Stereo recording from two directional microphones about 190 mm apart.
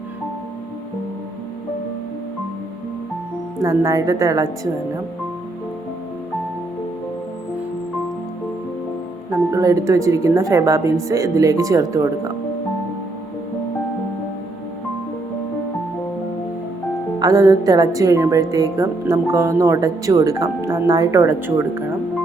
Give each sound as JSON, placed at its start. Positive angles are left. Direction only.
{"t": 3.6, "sound": "a woman's voice", "side_deg": -20}
{"t": 9.5, "sound": "a woman's voice", "side_deg": -15}
{"t": 17.2, "sound": "a woman's voice", "side_deg": -20}